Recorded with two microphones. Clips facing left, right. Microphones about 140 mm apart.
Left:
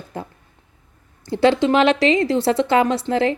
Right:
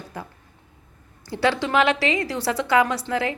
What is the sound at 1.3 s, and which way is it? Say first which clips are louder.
A woman's voice: left 6 dB; 25° left (ahead or behind).